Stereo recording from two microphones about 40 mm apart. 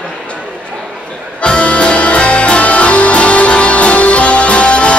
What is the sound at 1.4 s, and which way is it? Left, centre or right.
Music, left.